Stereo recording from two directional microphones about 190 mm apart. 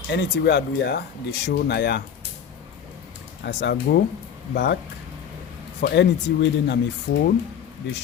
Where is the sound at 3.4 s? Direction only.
60° left (ahead or behind).